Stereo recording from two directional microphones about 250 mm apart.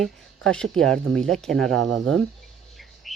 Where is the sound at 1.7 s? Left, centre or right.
Right.